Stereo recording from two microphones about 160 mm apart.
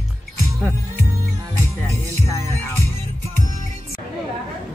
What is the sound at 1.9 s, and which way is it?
Music, 20° left (ahead or behind).